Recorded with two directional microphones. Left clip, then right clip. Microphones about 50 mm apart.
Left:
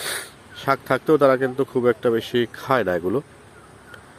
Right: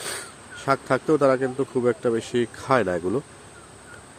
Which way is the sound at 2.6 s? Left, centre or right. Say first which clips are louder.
Even; centre.